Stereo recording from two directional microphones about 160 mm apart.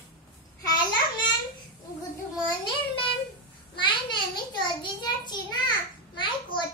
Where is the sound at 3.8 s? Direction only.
30° left (ahead or behind).